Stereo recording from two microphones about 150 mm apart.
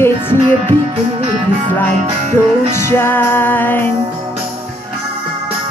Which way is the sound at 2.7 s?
15° left (ahead or behind).